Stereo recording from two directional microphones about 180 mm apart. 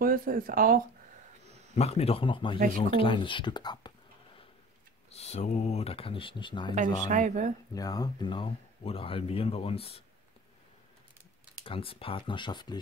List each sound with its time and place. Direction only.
0.0 s speech: 50° right (ahead or behind)
1.8 s speech: 35° left (ahead or behind)
5.1 s speech: 35° left (ahead or behind)
7.1 s speech: 40° right (ahead or behind)
7.7 s speech: 20° left (ahead or behind)
11.6 s speech: 30° left (ahead or behind)